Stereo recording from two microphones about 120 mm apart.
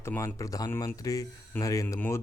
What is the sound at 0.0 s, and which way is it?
Speech, 20° left (ahead or behind).